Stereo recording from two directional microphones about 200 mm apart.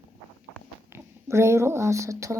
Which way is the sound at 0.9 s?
15° right (ahead or behind).